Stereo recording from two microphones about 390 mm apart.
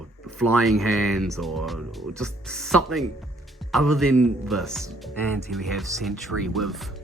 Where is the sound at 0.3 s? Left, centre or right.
Centre.